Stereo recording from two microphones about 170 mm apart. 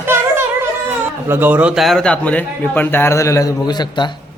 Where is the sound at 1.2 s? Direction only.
10° right (ahead or behind).